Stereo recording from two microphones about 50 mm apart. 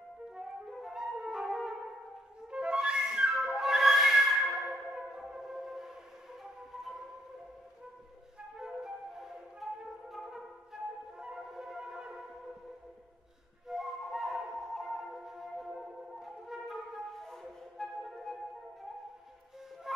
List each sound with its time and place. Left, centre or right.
0.3 s music: centre
2.5 s music: centre
6.4 s flute: centre
8.6 s flute: centre
11.2 s a sound: centre
13.7 s flute: centre
14.1 s music: centre
15.2 s flute: centre